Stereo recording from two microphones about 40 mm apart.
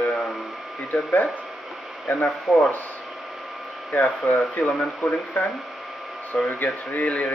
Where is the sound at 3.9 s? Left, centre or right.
Left.